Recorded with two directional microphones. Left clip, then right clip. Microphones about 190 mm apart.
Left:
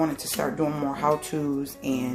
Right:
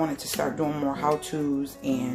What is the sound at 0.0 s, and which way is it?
Speech, 15° left (ahead or behind).